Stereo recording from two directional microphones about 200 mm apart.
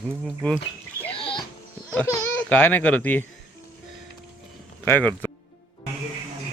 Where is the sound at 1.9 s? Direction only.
5° left (ahead or behind).